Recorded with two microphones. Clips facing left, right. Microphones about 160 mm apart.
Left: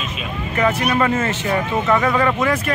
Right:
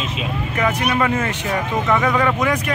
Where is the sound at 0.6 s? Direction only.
10° right (ahead or behind).